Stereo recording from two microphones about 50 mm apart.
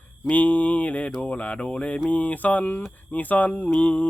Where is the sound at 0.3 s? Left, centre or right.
Left.